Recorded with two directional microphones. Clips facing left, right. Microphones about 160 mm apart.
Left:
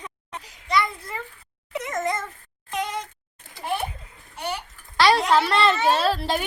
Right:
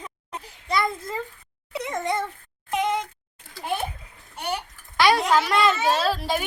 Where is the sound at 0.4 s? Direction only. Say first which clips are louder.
Left 1 dB; 50° right (ahead or behind).